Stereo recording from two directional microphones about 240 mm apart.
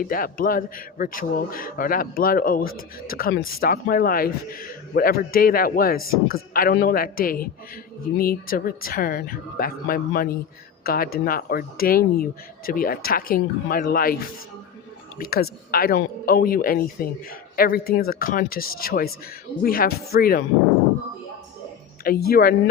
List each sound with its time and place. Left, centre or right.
0.0 s speech: left
22.0 s speech: left